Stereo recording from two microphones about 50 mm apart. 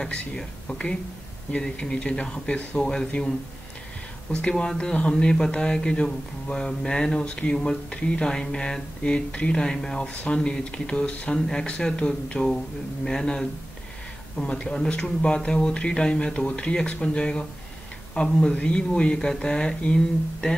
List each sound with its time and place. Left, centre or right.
0.0 s speech: centre
4.4 s speech: left
10.0 s speech: left